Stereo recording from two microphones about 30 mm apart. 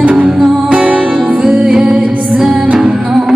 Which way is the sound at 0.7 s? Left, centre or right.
Right.